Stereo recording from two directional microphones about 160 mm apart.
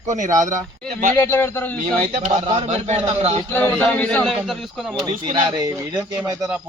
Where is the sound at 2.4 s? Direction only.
35° right (ahead or behind).